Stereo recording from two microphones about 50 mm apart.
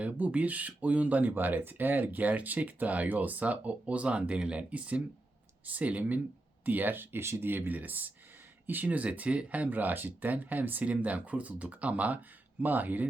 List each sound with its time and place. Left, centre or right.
0.0 s speech: right
7.2 s speech: right
7.4 s speech: right